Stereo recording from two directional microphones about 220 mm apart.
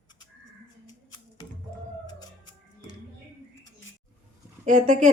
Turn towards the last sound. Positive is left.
turn(degrees=-35)  # may be behind; listen again after turning